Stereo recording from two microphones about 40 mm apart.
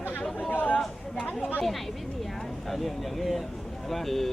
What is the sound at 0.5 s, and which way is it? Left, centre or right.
Chatter, left.